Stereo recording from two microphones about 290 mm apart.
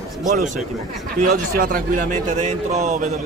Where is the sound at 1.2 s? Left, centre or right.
Right.